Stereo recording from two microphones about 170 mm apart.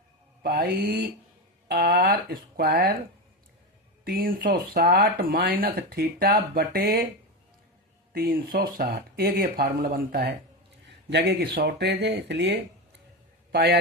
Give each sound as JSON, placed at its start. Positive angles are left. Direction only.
{"t": 0.4, "sound": "speech", "side_deg": -65}
{"t": 4.0, "sound": "speech", "side_deg": -60}
{"t": 8.1, "sound": "speech", "side_deg": -60}
{"t": 11.1, "sound": "speech", "side_deg": -85}
{"t": 13.5, "sound": "a man's voice", "side_deg": -70}